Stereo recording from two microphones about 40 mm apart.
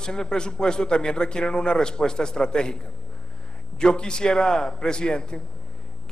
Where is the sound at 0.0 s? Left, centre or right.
Centre.